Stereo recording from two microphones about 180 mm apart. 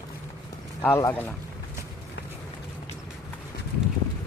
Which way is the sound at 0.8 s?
10° left (ahead or behind).